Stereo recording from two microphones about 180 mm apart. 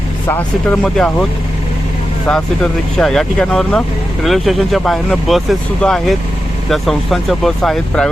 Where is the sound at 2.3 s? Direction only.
5° left (ahead or behind).